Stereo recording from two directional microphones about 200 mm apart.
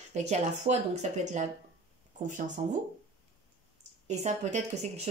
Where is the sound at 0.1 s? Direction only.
35° right (ahead or behind).